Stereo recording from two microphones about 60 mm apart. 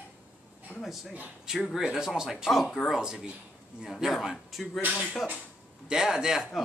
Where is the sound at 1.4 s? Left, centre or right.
Centre.